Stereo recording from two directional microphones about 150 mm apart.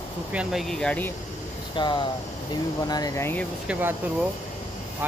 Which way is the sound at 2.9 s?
20° left (ahead or behind).